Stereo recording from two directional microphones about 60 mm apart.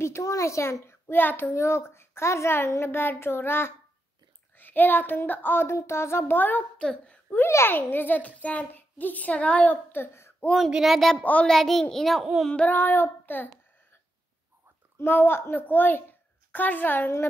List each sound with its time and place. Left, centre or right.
0.0 s a child's voice: left
1.5 s a child's voice: left
4.6 s child singing: left
5.7 s a child's voice: left
6.8 s a woman's voice: centre
7.4 s a child's voice: left
7.7 s a child's voice: left
10.8 s a child's voice: centre
12.6 s child singing: left
15.0 s child singing: left
15.6 s a woman's voice: left